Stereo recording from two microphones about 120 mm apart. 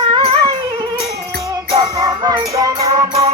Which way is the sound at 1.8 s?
35° right (ahead or behind).